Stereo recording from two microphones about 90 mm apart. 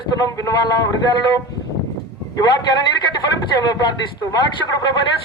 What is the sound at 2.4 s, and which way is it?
A man's voice, 50° left (ahead or behind).